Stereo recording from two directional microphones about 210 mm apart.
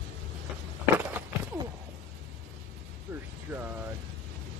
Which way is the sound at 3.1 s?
10° right (ahead or behind).